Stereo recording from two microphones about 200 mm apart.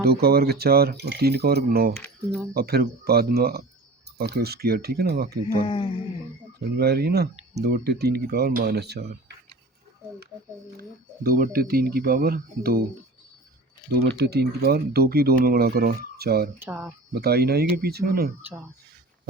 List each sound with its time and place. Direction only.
0.0 s speech: 50° right (ahead or behind)
2.0 s speech: 5° left (ahead or behind)
2.5 s speech: 50° right (ahead or behind)
5.6 s speech: 25° left (ahead or behind)
6.7 s speech: 55° right (ahead or behind)
10.8 s speech: 50° right (ahead or behind)
14.0 s speech: 55° right (ahead or behind)
16.6 s speech: 10° right (ahead or behind)
17.2 s speech: 50° right (ahead or behind)